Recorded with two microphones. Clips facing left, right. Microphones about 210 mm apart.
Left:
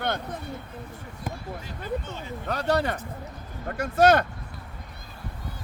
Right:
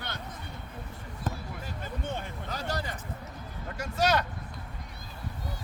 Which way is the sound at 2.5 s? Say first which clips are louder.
Left 11 dB; 65° left (ahead or behind).